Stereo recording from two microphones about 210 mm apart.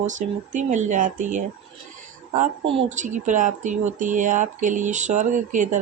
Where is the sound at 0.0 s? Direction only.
35° right (ahead or behind).